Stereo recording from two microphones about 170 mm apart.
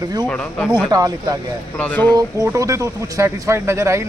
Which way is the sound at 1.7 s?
10° left (ahead or behind).